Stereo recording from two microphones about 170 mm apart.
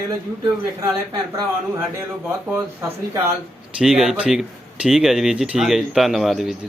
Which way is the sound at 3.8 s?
5° right (ahead or behind).